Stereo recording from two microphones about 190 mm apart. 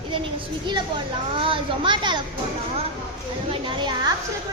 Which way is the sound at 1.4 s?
25° right (ahead or behind).